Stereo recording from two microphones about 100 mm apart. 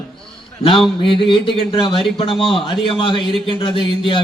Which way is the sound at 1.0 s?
55° left (ahead or behind).